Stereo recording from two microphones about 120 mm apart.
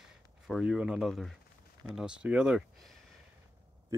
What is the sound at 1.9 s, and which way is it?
Speech, 5° right (ahead or behind).